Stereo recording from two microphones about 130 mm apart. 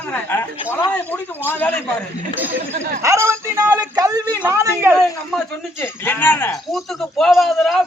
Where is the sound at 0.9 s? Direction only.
15° left (ahead or behind).